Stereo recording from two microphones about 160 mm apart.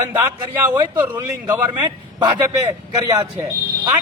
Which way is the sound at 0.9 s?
15° right (ahead or behind).